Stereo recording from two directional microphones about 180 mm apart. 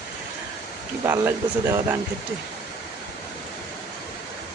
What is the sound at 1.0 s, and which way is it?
Speech, 15° right (ahead or behind).